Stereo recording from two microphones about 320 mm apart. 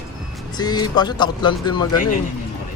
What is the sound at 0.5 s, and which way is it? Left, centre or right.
Speech, centre.